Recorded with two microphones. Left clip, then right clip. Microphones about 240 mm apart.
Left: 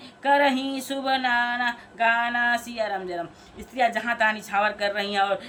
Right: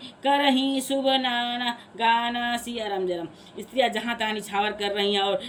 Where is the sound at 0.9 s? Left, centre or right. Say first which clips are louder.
Left 1 dB; left.